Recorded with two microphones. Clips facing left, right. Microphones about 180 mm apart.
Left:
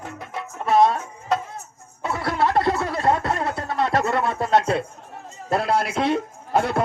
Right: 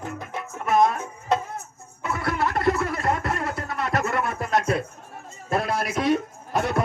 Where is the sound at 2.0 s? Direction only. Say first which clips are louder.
Left 3 dB; 30° left (ahead or behind).